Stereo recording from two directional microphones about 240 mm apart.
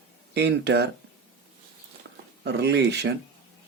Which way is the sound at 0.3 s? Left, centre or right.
Right.